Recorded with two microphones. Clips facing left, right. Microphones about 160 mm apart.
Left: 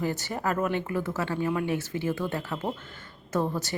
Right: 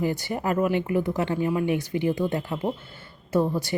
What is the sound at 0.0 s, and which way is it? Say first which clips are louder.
Speech: right 3 dB; 15° right (ahead or behind).